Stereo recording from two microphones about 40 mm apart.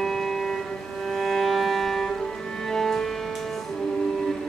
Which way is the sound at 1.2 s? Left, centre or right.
Centre.